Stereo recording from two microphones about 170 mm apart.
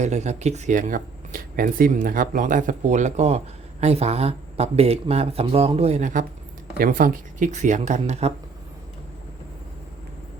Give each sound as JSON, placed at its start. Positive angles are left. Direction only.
{"t": 0.0, "sound": "speech", "side_deg": -40}